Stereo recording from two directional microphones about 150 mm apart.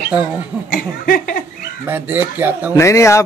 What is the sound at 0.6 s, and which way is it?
Speech, 70° left (ahead or behind).